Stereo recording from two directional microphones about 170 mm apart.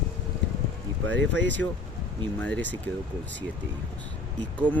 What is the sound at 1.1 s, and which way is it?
Speech, 90° right.